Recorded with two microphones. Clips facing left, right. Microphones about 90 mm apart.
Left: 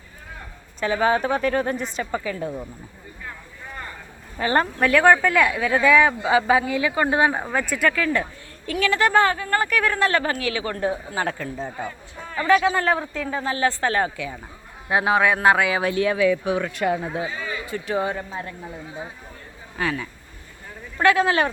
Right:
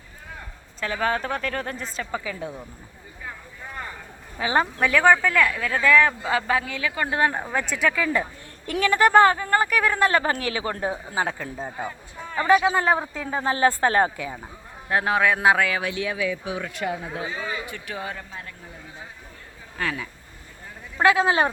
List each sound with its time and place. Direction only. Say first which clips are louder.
0.8 s speech: left 5 dB; 5° left (ahead or behind)
4.4 s a woman's voice: left 2 dB; 5° right (ahead or behind); by 7.3 s 20° left (ahead or behind)
7.3 s speech: left 2 dB; 5° left (ahead or behind)
7.9 s speech: left 1 dB; 10° right (ahead or behind)
10.2 s speech: even; 30° right (ahead or behind)
11.3 s speech: left 2 dB; 5° right (ahead or behind)
12.3 s speech: even; 25° right (ahead or behind)
14.8 s speech: left 2 dB; 10° left (ahead or behind)
15.8 s speech: left 7 dB; 45° left (ahead or behind); by 17.0 s 60° left (ahead or behind)
17.7 s a woman's voice: left 8 dB; 30° left (ahead or behind)
19.8 s speech: left 3 dB; 5° left (ahead or behind)
21.0 s speech: left 1 dB; 20° right (ahead or behind)